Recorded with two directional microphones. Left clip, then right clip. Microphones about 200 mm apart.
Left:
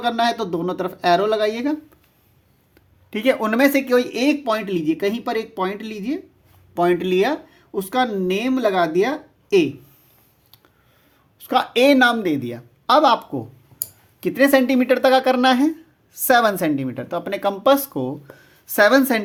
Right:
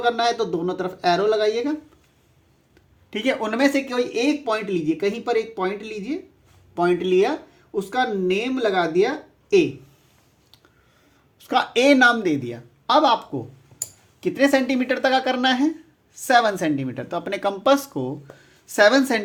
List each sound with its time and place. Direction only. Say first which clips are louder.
0.0 s speech: even; 45° left (ahead or behind)
3.1 s speech: left 4 dB; 25° left (ahead or behind); by 9.6 s 45° left (ahead or behind)
11.3 s a woman's voice: left 2 dB; 20° left (ahead or behind)